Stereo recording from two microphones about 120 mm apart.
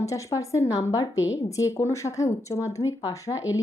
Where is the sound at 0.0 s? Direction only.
25° left (ahead or behind).